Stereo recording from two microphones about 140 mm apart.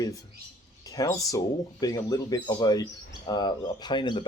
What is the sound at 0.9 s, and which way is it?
Speech, 25° left (ahead or behind).